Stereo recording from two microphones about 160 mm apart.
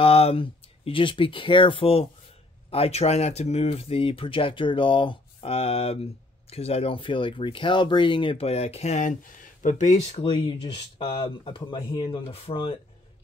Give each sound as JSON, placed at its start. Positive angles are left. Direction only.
{"t": 0.0, "sound": "speech", "side_deg": 40}